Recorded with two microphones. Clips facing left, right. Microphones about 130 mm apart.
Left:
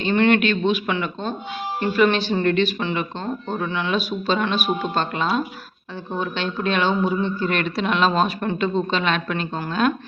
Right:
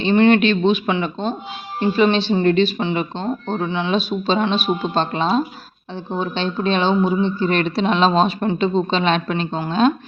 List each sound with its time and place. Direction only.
0.0 s speech: 20° right (ahead or behind)